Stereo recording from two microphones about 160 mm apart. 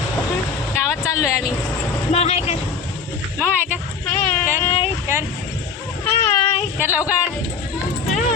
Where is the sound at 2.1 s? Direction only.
40° left (ahead or behind).